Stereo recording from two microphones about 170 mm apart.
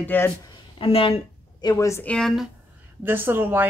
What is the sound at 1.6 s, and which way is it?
Speech, 20° left (ahead or behind).